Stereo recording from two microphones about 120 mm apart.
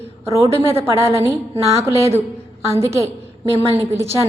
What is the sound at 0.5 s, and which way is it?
A woman's voice, 20° right (ahead or behind).